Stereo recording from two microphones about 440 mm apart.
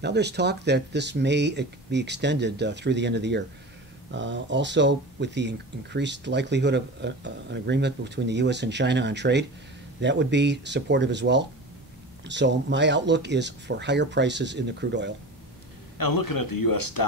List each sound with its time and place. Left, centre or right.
0.0 s speech: right
16.0 s speech: left